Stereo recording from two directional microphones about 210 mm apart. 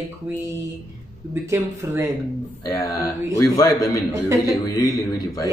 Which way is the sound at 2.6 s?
15° left (ahead or behind).